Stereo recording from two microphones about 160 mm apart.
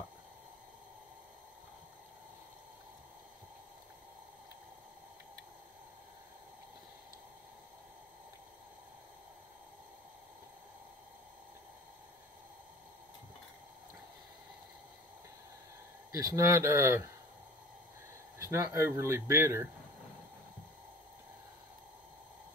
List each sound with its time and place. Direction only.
16.1 s speech: 20° right (ahead or behind)
18.4 s speech: 15° right (ahead or behind)